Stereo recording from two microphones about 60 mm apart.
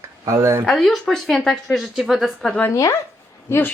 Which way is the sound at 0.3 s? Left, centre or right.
Right.